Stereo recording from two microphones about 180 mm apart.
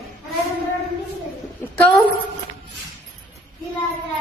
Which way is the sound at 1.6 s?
5° left (ahead or behind).